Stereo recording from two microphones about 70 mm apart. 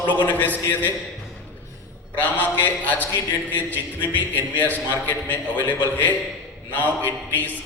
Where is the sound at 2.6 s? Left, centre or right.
Left.